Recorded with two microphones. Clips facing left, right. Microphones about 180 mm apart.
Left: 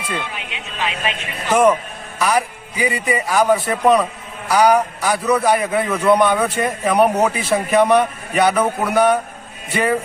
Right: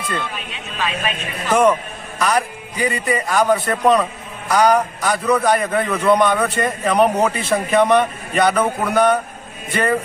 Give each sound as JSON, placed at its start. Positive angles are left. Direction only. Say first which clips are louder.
{"t": 0.1, "sound": "speech", "louder": "left 1 dB", "side_deg": 20}
{"t": 2.1, "sound": "a man's voice", "louder": "left 1 dB", "side_deg": 5}